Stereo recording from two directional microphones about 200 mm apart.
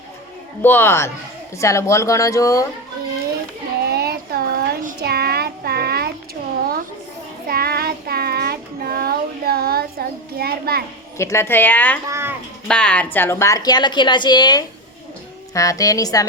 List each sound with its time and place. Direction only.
0.6 s speech: 10° left (ahead or behind)
3.8 s a sound: 50° right (ahead or behind)
7.4 s child singing: 50° right (ahead or behind)
11.2 s speech: 15° left (ahead or behind)
12.0 s a sound: 15° right (ahead or behind)
12.6 s a woman's voice: 5° left (ahead or behind)